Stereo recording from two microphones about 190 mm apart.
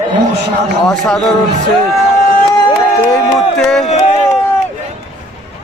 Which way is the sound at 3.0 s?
5° left (ahead or behind).